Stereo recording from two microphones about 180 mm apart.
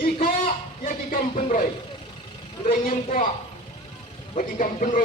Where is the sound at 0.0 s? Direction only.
50° left (ahead or behind).